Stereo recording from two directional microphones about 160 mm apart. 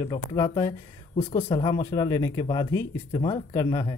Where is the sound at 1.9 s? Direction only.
25° left (ahead or behind).